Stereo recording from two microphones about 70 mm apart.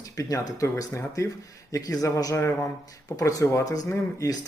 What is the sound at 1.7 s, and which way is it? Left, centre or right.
A man's voice, left.